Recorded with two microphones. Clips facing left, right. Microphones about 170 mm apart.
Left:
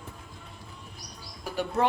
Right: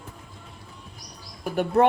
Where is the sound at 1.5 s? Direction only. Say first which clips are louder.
Right 7 dB; 60° right (ahead or behind).